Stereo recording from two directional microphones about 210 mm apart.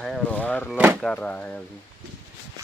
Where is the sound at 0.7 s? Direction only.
5° right (ahead or behind).